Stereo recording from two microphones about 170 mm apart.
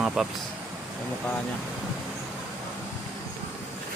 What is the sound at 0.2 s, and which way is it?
Speech, 5° right (ahead or behind).